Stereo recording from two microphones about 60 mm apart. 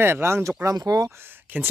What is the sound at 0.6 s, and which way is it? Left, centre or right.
Speech, right.